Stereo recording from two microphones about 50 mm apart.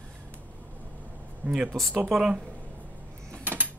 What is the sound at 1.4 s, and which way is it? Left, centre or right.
Speech, right.